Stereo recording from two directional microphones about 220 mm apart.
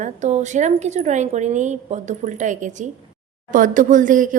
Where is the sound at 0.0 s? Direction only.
30° right (ahead or behind).